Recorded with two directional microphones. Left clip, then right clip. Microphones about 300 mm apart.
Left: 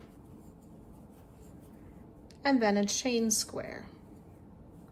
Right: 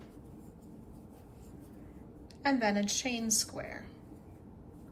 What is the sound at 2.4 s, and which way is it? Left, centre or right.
Speech, centre.